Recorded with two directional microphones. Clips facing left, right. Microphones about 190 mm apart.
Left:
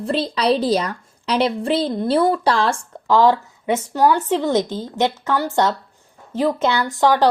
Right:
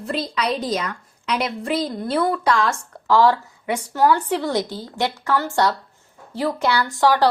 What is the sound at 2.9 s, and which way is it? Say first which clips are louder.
A woman's voice: left 1 dB; 20° left (ahead or behind).